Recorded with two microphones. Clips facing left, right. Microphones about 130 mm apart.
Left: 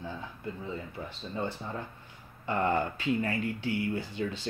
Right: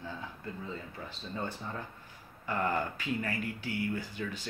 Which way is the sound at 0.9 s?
25° left (ahead or behind).